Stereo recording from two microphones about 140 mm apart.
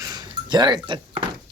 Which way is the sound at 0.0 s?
30° right (ahead or behind).